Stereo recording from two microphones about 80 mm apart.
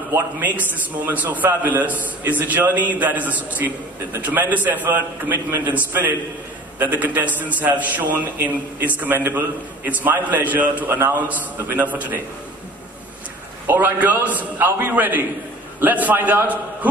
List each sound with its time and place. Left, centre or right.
0.6 s a man's voice: right
10.9 s a man's voice: right
13.7 s a man's voice: right